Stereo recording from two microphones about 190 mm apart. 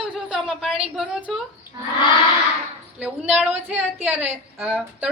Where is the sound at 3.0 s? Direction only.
5° right (ahead or behind).